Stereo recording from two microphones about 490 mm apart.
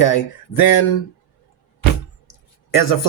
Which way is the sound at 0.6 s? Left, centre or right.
Left.